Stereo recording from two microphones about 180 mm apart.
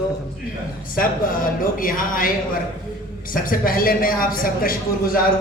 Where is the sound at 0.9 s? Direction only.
50° left (ahead or behind).